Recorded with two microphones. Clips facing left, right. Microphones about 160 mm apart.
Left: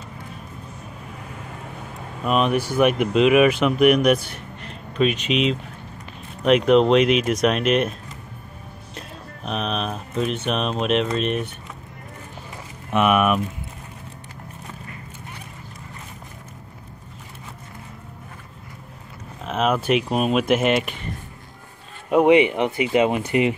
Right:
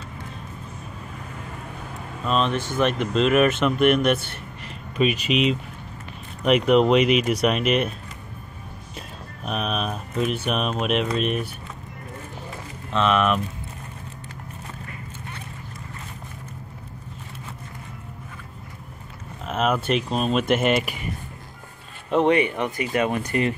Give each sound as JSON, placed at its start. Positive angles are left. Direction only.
{"t": 2.2, "sound": "speech", "side_deg": 10}
{"t": 8.9, "sound": "speech", "side_deg": -5}
{"t": 12.9, "sound": "speech", "side_deg": 10}
{"t": 19.4, "sound": "speech", "side_deg": 0}
{"t": 22.1, "sound": "speech", "side_deg": 15}